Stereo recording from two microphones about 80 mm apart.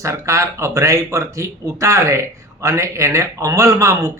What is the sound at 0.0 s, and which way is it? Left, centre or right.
Speech, right.